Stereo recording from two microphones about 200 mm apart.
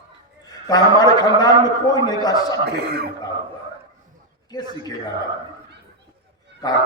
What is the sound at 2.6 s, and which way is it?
Speech, 55° right (ahead or behind).